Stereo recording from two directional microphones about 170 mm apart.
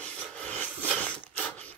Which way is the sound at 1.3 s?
10° left (ahead or behind).